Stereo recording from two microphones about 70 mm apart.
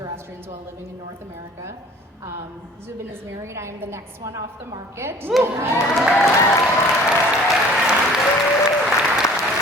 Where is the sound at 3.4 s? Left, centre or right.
Right.